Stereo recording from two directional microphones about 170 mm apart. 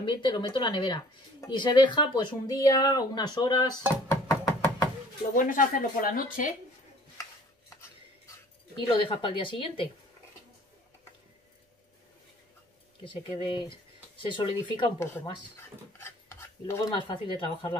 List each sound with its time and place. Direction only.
0.0 s speech: 25° left (ahead or behind)
4.1 s knock: 20° left (ahead or behind)
5.3 s speech: 50° left (ahead or behind)
8.7 s speech: 30° left (ahead or behind)
13.0 s speech: 30° left (ahead or behind)
16.0 s dishes: 15° left (ahead or behind)
16.9 s speech: 30° left (ahead or behind)